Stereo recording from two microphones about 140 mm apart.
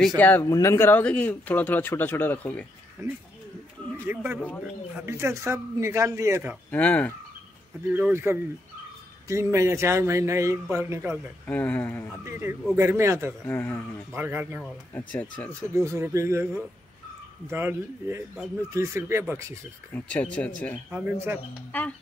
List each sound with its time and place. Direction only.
0.2 s speech: 15° left (ahead or behind)
3.0 s a man's voice: 20° right (ahead or behind)
6.7 s speech: 10° left (ahead or behind)
7.9 s a man's voice: 15° right (ahead or behind)
11.4 s speech: 10° left (ahead or behind)
12.3 s a man's voice: 15° right (ahead or behind)
13.5 s speech: 15° left (ahead or behind)
14.1 s speech: 15° right (ahead or behind)
15.0 s speech: 10° left (ahead or behind)
15.7 s a man's voice: 20° right (ahead or behind)
19.9 s speech: 10° left (ahead or behind)
20.9 s speech: 15° right (ahead or behind)